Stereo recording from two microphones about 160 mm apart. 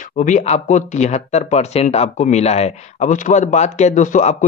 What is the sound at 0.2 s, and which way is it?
Speech, 50° left (ahead or behind).